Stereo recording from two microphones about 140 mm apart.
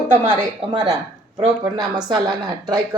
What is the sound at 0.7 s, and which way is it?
A woman's voice, 35° right (ahead or behind).